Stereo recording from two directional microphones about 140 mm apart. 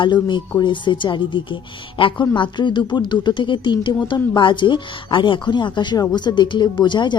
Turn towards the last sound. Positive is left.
turn(degrees=35)  # may be behind; listen again after turning